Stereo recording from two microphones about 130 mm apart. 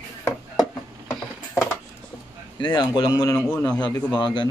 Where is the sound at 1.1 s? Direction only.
Centre (ahead or behind).